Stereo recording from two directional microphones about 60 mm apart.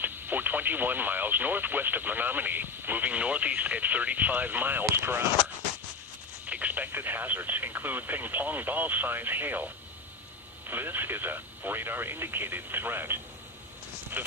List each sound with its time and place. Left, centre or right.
0.0 s speech: right
6.4 s speech: right
10.7 s speech: right